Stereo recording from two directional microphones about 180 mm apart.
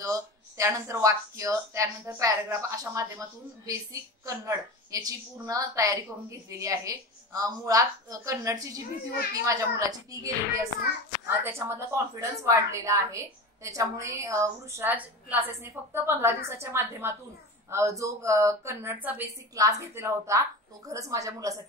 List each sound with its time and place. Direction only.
0.0 s a woman's voice: 15° right (ahead or behind)